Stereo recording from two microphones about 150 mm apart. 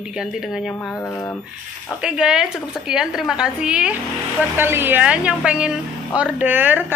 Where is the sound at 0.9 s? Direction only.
20° left (ahead or behind).